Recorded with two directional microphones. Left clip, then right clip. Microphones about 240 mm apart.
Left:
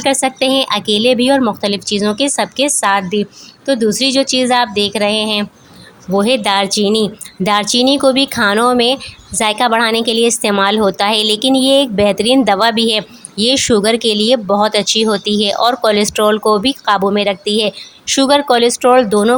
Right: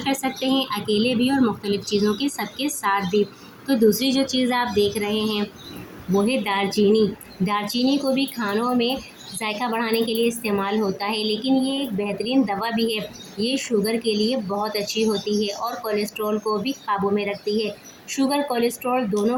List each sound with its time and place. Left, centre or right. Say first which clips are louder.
0.0 s a woman's voice: left 11 dB; left